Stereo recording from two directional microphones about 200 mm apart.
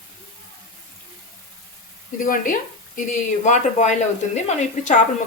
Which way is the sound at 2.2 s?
40° left (ahead or behind).